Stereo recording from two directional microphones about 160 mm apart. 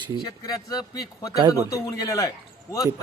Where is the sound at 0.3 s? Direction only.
25° left (ahead or behind).